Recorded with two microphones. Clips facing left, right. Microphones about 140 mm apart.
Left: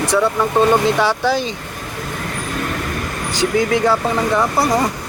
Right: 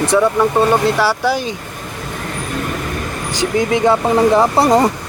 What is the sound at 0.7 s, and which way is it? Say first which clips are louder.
Speech: right 1 dB; 5° right (ahead or behind).